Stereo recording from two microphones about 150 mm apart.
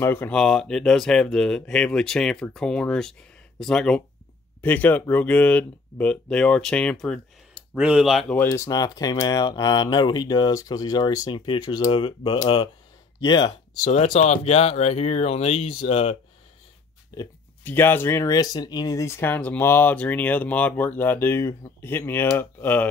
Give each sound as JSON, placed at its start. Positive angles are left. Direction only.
{"t": 0.0, "sound": "speech", "side_deg": 15}
{"t": 7.7, "sound": "speech", "side_deg": -10}
{"t": 8.4, "sound": "speech", "side_deg": 20}
{"t": 13.8, "sound": "speech", "side_deg": 50}
{"t": 17.1, "sound": "speech", "side_deg": 25}
{"t": 17.6, "sound": "speech", "side_deg": 15}